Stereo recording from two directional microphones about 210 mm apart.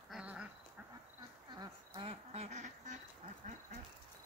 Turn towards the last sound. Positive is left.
turn(degrees=-35)  # may be behind; listen again after turning